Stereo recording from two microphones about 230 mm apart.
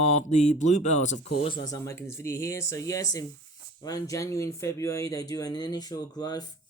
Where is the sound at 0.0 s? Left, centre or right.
Left.